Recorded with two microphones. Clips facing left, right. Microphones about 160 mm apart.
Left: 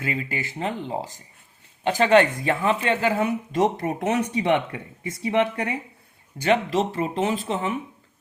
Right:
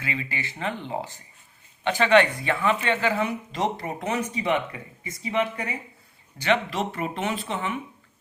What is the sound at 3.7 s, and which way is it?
Speech, 70° left (ahead or behind).